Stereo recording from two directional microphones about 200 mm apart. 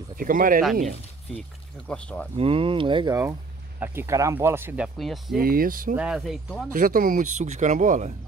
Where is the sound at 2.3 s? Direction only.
30° right (ahead or behind); by 5.4 s centre (ahead or behind).